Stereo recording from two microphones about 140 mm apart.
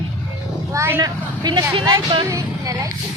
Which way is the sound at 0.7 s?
20° right (ahead or behind).